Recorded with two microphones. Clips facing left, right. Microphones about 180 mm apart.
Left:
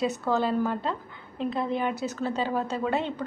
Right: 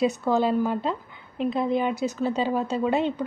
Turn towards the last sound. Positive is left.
turn(degrees=-15)  # may be behind; listen again after turning